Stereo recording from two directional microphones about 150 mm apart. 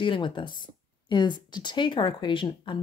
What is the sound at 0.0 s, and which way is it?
Speech, 30° left (ahead or behind).